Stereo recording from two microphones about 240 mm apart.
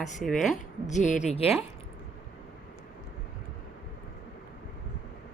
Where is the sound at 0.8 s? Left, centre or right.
Left.